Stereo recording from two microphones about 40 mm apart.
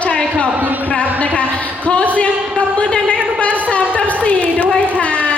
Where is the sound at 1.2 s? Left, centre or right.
Left.